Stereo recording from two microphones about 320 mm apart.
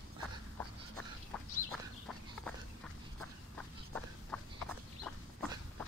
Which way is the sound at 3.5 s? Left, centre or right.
Centre.